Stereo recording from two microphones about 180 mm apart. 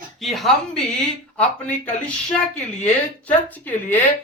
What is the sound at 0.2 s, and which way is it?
Speech, centre (ahead or behind).